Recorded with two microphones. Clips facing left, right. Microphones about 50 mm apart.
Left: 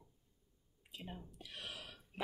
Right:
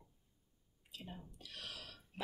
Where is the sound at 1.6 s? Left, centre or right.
Centre.